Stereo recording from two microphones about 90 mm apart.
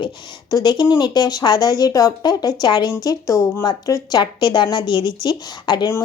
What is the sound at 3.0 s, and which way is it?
Speech, 40° left (ahead or behind).